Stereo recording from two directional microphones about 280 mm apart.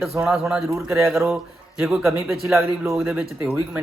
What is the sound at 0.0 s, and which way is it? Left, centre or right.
A man's voice, centre.